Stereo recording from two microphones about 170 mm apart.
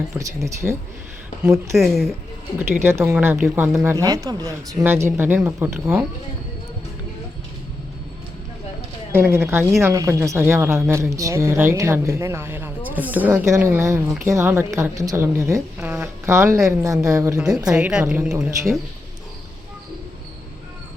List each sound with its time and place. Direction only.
0.1 s a woman's voice: 20° right (ahead or behind)
1.5 s speech: centre (ahead or behind)
2.8 s a woman's voice: 15° right (ahead or behind)
9.1 s a woman's voice: 15° right (ahead or behind)
17.7 s a woman's voice: 5° right (ahead or behind)